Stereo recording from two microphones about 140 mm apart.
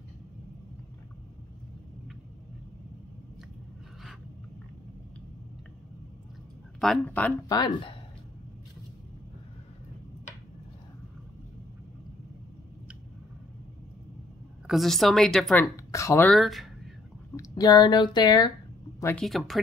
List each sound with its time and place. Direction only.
6.8 s speech: 5° left (ahead or behind)
7.4 s speech: 30° left (ahead or behind)
14.7 s a woman's voice: centre (ahead or behind)
15.5 s speech: 20° left (ahead or behind)
16.3 s speech: centre (ahead or behind)
17.4 s speech: 25° left (ahead or behind)
19.1 s a woman's voice: centre (ahead or behind)